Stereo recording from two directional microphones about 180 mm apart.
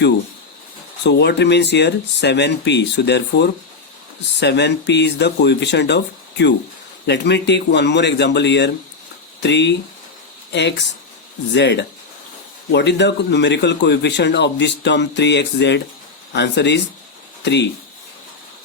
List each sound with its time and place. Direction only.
1.0 s speech: 70° left (ahead or behind)